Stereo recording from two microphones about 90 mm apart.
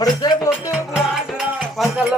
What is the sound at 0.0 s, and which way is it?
Music, 45° left (ahead or behind).